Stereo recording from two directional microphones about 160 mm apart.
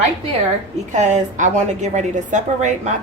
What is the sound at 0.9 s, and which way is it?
A woman's voice, 50° right (ahead or behind).